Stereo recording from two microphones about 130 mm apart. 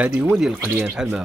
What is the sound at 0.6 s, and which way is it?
Speech, 20° right (ahead or behind).